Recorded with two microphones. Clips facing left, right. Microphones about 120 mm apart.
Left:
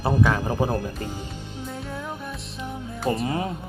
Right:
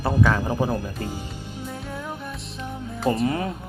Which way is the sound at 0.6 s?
25° left (ahead or behind).